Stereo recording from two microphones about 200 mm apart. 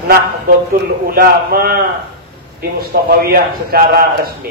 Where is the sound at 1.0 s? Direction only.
45° right (ahead or behind).